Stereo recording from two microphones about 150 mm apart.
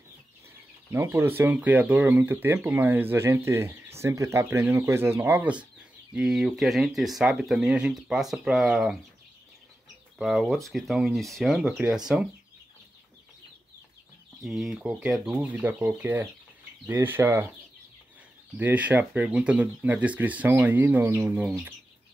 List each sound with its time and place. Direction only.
0.9 s speech: 15° right (ahead or behind)
10.1 s speech: centre (ahead or behind)
14.4 s speech: centre (ahead or behind)
18.6 s speech: 10° right (ahead or behind)